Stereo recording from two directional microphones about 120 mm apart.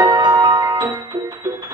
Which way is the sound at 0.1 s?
40° right (ahead or behind).